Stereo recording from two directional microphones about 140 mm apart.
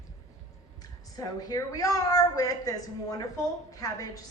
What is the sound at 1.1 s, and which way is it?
A woman's voice, 25° left (ahead or behind).